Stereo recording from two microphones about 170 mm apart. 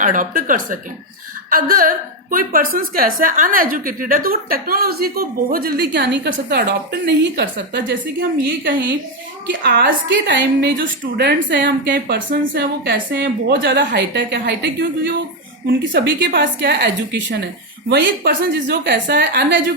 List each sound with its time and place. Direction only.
0.0 s a woman's voice: 50° right (ahead or behind); by 9.0 s 90° right
9.5 s a woman's voice: 65° right (ahead or behind); by 10.8 s 90° right
11.0 s a woman's voice: 70° right (ahead or behind); by 11.6 s 90° right
11.9 s a woman's voice: 75° right (ahead or behind)
16.2 s a woman's voice: 60° right (ahead or behind); by 17.2 s 80° right
17.8 s a woman's voice: 70° right (ahead or behind); by 19.5 s 90° right